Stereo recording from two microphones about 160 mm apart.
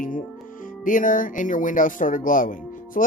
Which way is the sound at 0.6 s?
55° left (ahead or behind).